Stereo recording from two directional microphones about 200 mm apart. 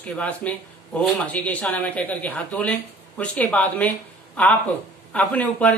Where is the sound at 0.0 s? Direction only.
5° left (ahead or behind).